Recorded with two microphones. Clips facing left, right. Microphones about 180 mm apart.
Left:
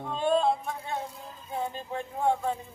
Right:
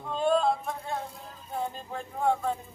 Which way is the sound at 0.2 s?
Centre (ahead or behind).